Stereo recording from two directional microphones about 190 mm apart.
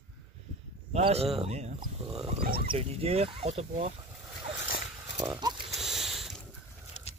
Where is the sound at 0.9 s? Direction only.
30° right (ahead or behind).